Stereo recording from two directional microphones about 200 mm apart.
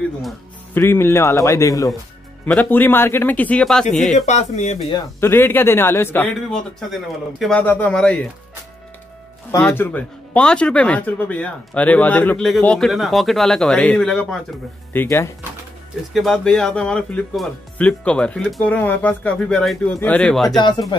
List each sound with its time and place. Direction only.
0.7 s speech: 10° left (ahead or behind)
4.1 s speech: 35° left (ahead or behind)
4.9 s speech: 10° left (ahead or behind)
9.5 s speech: 10° left (ahead or behind)
16.1 s speech: centre (ahead or behind)
20.4 s speech: 20° left (ahead or behind)